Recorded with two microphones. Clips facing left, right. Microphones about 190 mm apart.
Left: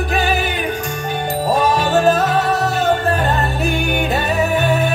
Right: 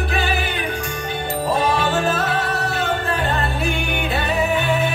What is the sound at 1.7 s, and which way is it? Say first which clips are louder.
Music: left 5 dB; 40° left (ahead or behind).